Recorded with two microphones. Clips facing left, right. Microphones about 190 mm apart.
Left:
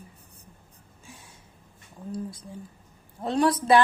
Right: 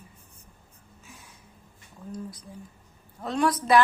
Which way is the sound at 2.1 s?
25° left (ahead or behind).